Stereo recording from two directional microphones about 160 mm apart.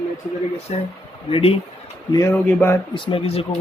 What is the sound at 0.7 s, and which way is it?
Speech, 40° left (ahead or behind).